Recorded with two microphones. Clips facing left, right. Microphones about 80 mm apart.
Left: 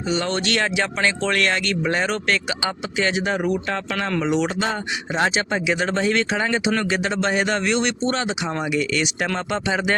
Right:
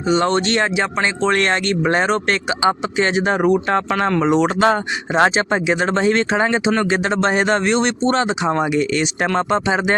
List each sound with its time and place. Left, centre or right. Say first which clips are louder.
0.1 s speech: right 6 dB; right
5.5 s speech: right 4 dB; right